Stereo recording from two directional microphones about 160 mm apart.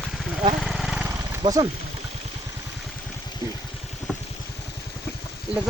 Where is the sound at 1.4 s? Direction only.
25° right (ahead or behind).